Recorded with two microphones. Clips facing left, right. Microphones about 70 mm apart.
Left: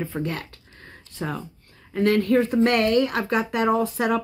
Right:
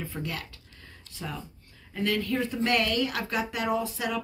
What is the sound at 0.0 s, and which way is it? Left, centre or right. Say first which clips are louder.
Speech: left 7 dB; left.